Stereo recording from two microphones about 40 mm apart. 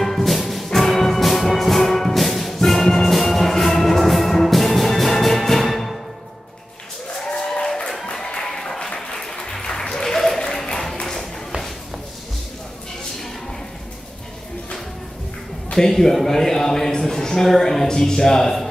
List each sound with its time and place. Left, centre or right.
0.0 s music: centre
7.2 s a sound: centre
7.6 s music: centre
8.4 s applause: centre
15.7 s a man's voice: centre